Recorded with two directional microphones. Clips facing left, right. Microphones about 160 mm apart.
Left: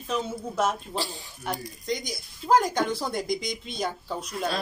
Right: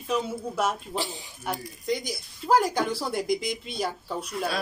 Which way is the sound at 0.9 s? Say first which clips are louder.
Right 1 dB; 20° right (ahead or behind).